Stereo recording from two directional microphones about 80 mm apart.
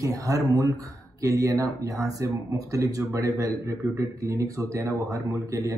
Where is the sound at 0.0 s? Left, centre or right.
Right.